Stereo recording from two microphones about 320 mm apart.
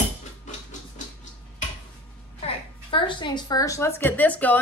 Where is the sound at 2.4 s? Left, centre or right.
Centre.